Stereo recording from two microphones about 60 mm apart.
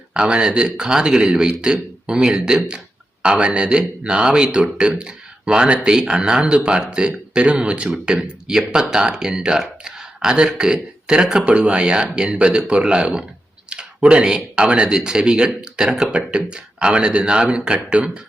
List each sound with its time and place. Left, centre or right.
0.1 s a man's voice: centre